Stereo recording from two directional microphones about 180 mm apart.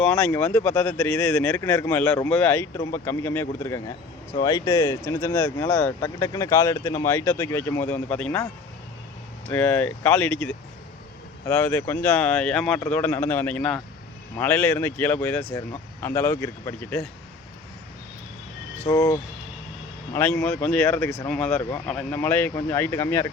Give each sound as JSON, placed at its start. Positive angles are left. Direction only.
{"t": 0.0, "sound": "speech", "side_deg": 5}
{"t": 9.5, "sound": "speech", "side_deg": 10}
{"t": 11.4, "sound": "speech", "side_deg": 10}
{"t": 18.8, "sound": "speech", "side_deg": 15}